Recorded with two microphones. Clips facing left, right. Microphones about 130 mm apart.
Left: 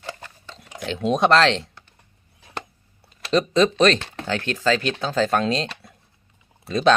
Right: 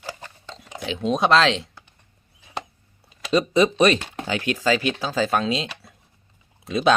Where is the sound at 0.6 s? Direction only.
Centre (ahead or behind).